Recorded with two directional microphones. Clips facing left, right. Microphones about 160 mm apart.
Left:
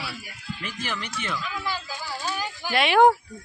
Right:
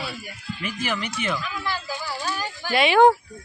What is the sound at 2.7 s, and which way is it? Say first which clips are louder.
Speech: right 2 dB; centre (ahead or behind).